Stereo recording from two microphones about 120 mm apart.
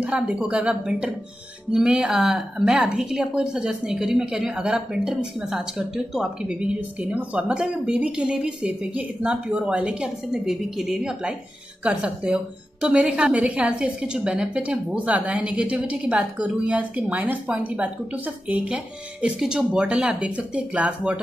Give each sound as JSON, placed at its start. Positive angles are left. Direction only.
{"t": 0.0, "sound": "a woman's voice", "side_deg": -10}
{"t": 7.3, "sound": "a woman's voice", "side_deg": -10}